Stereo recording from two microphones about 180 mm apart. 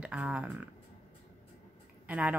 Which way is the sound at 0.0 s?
5° right (ahead or behind).